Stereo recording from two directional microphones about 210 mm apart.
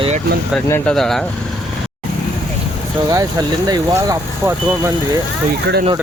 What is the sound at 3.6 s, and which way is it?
Speech, 15° right (ahead or behind).